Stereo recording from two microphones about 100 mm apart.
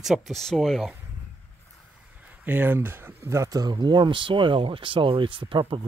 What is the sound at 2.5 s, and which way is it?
Speech, 20° right (ahead or behind).